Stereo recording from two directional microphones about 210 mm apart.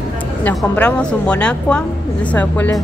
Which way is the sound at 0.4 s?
5° left (ahead or behind).